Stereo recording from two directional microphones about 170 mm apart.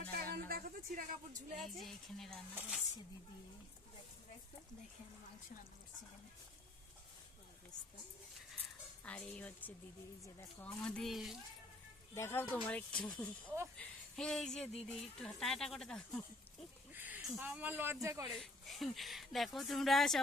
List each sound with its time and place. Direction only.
0.1 s music: 65° right (ahead or behind)
1.5 s speech: centre (ahead or behind)
9.0 s speech: 10° left (ahead or behind)
10.8 s speech: 5° left (ahead or behind)
12.1 s speech: 15° left (ahead or behind)
13.4 s speech: 10° right (ahead or behind)
13.7 s speech: 5° left (ahead or behind)
16.9 s speech: 10° right (ahead or behind)
18.3 s speech: centre (ahead or behind)